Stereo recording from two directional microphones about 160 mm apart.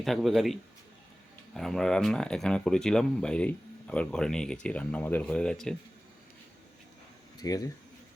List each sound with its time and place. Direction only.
0.0 s speech: centre (ahead or behind)
7.4 s speech: 25° left (ahead or behind)